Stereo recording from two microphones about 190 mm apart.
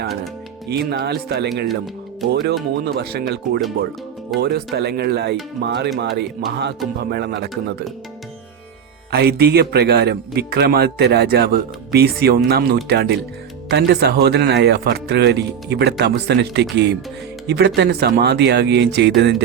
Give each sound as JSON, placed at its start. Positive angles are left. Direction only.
{"t": 0.7, "sound": "a man's voice", "side_deg": -60}
{"t": 2.8, "sound": "a man's voice", "side_deg": -55}
{"t": 9.1, "sound": "a man's voice", "side_deg": -55}